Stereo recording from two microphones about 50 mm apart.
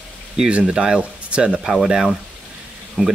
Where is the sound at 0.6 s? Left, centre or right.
Centre.